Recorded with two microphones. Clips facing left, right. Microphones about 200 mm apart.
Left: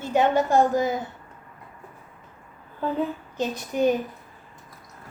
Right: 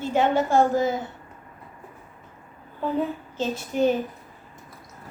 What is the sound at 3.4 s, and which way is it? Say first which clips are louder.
Speech: right 1 dB; 15° left (ahead or behind).